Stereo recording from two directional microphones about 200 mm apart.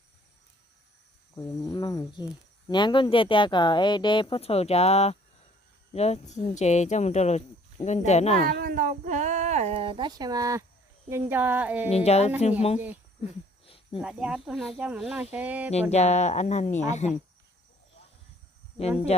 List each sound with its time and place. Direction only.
1.4 s speech: 20° left (ahead or behind)
8.4 s speech: 45° right (ahead or behind); by 11.9 s 10° right (ahead or behind)
11.9 s speech: 30° left (ahead or behind)
13.7 s cricket: 25° left (ahead or behind)
14.0 s speech: 5° right (ahead or behind)
15.7 s speech: 35° left (ahead or behind)
18.8 s speech: 30° left (ahead or behind)